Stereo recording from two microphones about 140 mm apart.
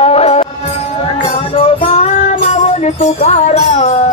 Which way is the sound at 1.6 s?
50° left (ahead or behind).